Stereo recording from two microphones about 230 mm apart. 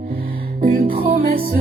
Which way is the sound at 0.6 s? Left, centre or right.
Right.